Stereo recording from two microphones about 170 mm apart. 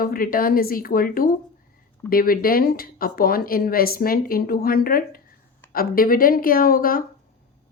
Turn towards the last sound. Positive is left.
turn(degrees=55)  # may be behind; listen again after turning